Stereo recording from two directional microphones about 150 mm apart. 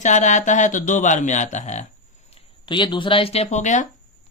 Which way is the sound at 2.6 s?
30° left (ahead or behind).